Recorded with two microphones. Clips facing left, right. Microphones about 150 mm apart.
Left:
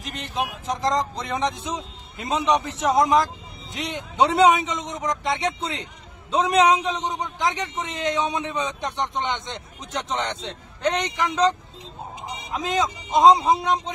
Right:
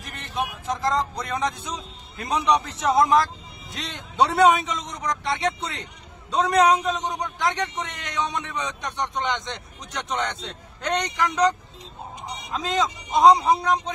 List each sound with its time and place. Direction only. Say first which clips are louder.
0.4 s speech: left 1 dB; 20° left (ahead or behind)